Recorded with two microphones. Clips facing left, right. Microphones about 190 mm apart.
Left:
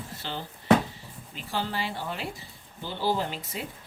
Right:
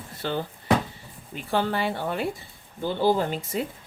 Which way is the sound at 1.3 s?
55° right (ahead or behind).